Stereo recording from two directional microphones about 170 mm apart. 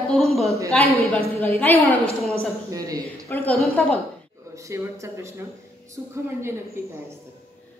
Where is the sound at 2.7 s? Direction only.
20° right (ahead or behind).